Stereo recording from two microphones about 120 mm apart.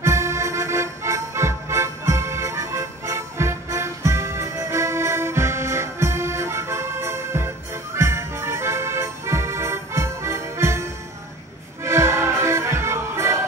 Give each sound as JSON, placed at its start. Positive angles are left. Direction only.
{"t": 0.0, "sound": "music", "side_deg": -25}